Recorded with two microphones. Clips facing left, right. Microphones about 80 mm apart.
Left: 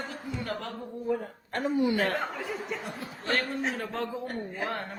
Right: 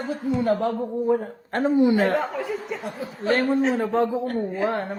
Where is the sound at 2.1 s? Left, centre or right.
Centre.